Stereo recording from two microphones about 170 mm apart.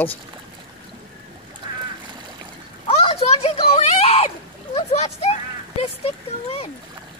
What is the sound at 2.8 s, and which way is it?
Splash, 35° left (ahead or behind).